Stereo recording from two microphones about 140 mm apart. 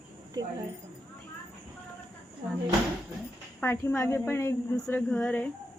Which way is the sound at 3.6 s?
15° left (ahead or behind).